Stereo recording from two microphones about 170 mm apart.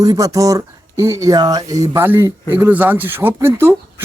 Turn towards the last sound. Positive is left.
turn(degrees=-15)  # may be behind; listen again after turning